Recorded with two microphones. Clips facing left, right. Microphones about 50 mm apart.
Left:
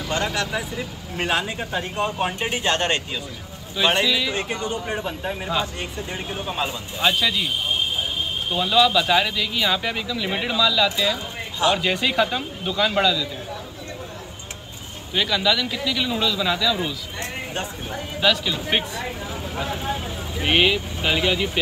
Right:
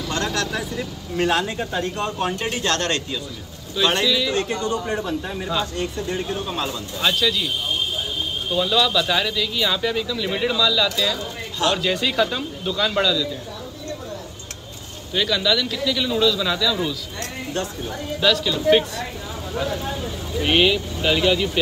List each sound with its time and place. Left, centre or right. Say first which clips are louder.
0.1 s a man's voice: left 1 dB; centre
15.1 s a man's voice: right 1 dB; centre